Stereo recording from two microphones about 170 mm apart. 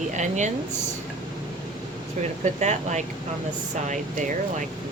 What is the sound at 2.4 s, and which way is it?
Speech, 45° right (ahead or behind).